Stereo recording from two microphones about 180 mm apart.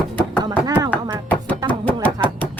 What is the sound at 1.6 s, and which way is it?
Music, 10° left (ahead or behind).